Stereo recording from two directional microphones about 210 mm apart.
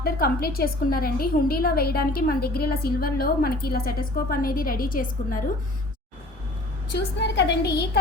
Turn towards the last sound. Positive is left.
turn(degrees=50)  # may be behind; listen again after turning